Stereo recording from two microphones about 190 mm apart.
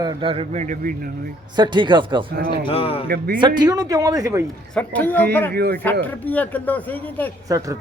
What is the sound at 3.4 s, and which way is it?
A man's voice, 25° right (ahead or behind).